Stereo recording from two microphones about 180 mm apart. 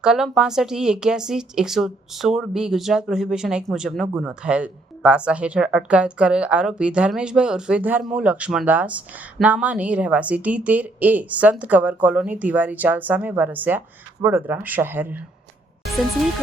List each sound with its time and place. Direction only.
0.0 s a woman's voice: 5° right (ahead or behind)